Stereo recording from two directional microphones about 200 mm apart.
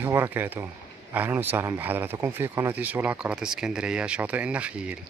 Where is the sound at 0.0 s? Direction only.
10° right (ahead or behind).